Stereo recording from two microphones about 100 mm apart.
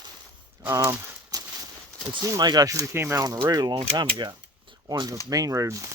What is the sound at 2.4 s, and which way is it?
Speech, 40° right (ahead or behind).